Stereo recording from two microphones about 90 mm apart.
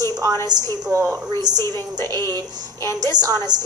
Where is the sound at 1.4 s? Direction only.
50° right (ahead or behind).